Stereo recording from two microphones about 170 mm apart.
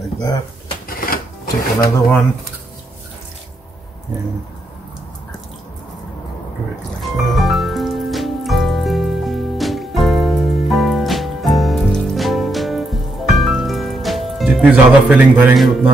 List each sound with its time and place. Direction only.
0.8 s filing: 55° left (ahead or behind)
7.0 s music: centre (ahead or behind)